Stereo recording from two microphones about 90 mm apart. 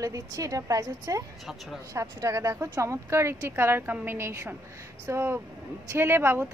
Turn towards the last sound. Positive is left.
turn(degrees=-25)  # may be behind; listen again after turning